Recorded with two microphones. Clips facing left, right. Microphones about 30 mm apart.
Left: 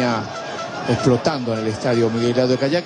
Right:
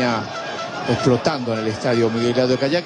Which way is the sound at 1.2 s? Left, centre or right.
Centre.